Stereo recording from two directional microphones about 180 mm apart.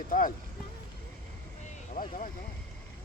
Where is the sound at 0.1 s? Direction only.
50° left (ahead or behind).